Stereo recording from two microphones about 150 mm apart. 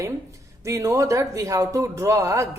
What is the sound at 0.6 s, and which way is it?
A woman's voice, 20° right (ahead or behind).